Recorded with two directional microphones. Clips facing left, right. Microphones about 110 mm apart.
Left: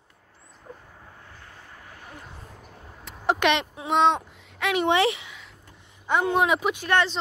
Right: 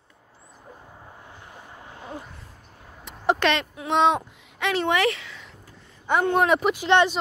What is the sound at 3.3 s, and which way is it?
Speech, 20° left (ahead or behind).